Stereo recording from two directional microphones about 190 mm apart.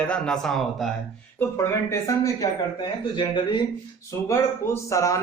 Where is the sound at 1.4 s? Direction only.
15° left (ahead or behind).